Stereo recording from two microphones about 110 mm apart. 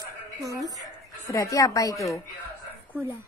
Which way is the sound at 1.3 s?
30° left (ahead or behind).